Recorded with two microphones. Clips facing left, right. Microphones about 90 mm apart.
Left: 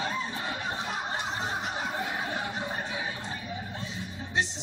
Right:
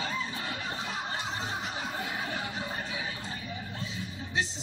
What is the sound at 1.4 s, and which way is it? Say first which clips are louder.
Chuckle: left 3 dB; 40° left (ahead or behind).